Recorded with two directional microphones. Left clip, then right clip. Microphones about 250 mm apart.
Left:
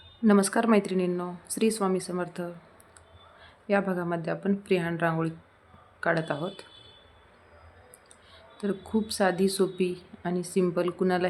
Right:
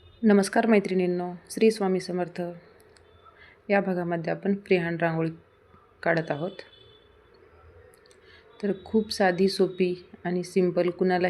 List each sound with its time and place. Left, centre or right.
0.3 s speech: centre
8.5 s speech: centre